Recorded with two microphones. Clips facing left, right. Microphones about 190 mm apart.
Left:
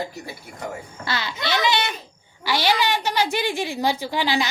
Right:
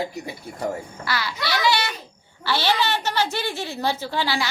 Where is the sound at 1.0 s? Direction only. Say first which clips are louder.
Left 1 dB; 20° left (ahead or behind).